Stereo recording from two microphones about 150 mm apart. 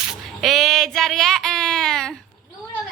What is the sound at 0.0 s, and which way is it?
Child singing, centre (ahead or behind).